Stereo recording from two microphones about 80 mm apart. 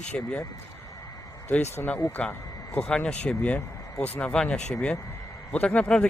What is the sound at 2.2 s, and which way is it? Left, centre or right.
Speech, centre.